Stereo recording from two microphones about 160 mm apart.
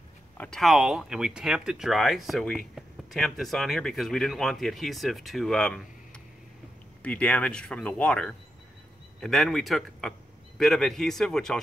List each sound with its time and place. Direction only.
0.4 s speech: 5° left (ahead or behind)